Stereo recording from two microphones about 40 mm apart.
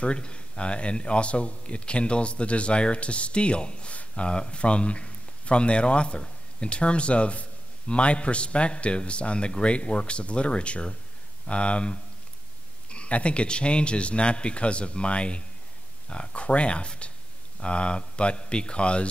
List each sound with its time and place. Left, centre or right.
0.0 s speech: left